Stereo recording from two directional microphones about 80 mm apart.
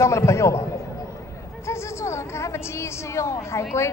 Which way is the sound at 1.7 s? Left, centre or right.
Left.